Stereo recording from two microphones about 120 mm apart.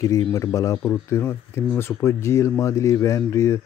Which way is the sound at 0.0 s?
25° left (ahead or behind).